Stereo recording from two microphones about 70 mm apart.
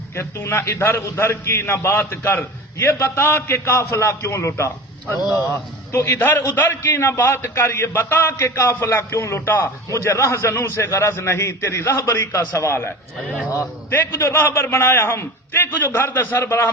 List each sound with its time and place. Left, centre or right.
0.2 s a man's voice: left
5.2 s a man's voice: centre
5.5 s a man's voice: left
13.3 s a man's voice: right
13.9 s a man's voice: left